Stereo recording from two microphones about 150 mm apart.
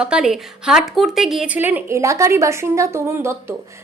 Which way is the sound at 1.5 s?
15° right (ahead or behind).